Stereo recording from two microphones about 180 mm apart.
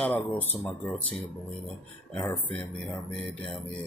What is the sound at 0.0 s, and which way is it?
Speech, 10° left (ahead or behind).